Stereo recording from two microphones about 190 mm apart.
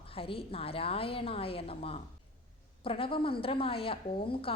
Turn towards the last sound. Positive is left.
turn(degrees=30)  # may be behind; listen again after turning